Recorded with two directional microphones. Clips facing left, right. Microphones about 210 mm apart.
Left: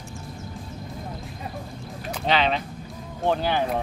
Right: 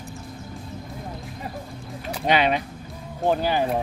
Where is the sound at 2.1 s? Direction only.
10° right (ahead or behind).